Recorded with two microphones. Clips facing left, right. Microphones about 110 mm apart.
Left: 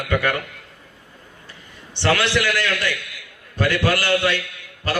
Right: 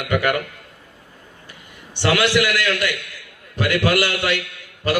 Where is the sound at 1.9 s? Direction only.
15° right (ahead or behind).